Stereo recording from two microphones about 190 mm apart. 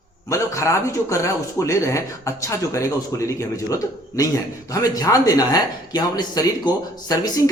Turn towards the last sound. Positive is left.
turn(degrees=20)  # may be behind; listen again after turning